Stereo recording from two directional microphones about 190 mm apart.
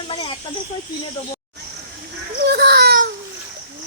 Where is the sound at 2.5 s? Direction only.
55° right (ahead or behind).